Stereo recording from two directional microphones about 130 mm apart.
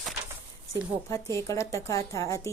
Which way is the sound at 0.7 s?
25° left (ahead or behind).